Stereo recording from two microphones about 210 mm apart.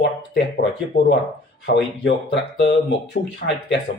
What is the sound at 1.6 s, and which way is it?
Speech, 60° left (ahead or behind).